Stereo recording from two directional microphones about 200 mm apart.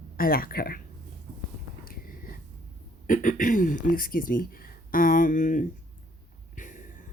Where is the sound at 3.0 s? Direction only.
40° left (ahead or behind).